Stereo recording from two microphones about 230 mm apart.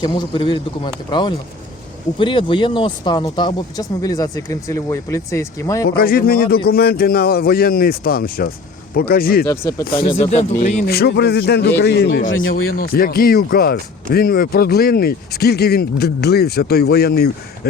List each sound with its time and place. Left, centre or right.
0.0 s a man's voice: centre
5.8 s speech: left
9.5 s speech: centre
9.8 s speech: left
12.3 s speech: left
12.7 s speech: left